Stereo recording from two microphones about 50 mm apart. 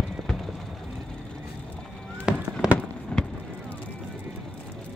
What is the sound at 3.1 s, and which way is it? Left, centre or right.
Fireworks, left.